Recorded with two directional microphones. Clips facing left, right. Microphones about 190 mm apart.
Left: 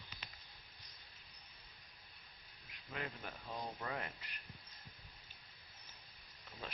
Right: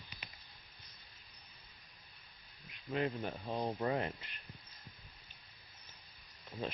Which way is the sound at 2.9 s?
25° right (ahead or behind).